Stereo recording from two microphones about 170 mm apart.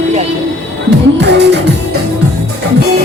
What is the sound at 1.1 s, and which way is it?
Music, 90° right.